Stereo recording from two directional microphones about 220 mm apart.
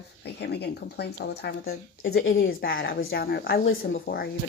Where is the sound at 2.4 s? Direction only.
45° left (ahead or behind).